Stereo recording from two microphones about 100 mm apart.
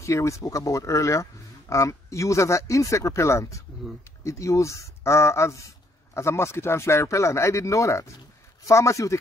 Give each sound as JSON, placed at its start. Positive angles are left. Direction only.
{"t": 0.0, "sound": "speech", "side_deg": 30}